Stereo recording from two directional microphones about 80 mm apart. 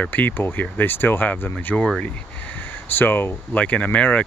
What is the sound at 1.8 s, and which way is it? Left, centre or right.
Speech, centre.